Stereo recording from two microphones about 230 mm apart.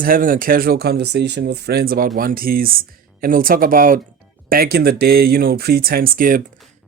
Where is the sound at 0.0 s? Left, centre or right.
Right.